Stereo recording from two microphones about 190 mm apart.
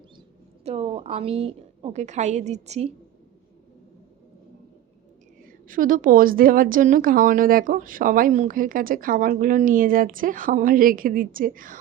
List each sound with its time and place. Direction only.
0.6 s a woman's voice: 35° right (ahead or behind)
5.5 s a woman's voice: 45° right (ahead or behind)